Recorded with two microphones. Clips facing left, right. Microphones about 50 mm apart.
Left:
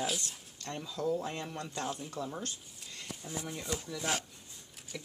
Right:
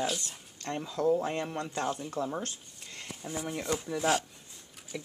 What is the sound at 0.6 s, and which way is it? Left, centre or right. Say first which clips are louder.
Speech: right 6 dB; right.